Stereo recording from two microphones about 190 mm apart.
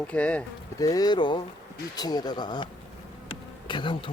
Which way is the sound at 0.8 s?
20° left (ahead or behind).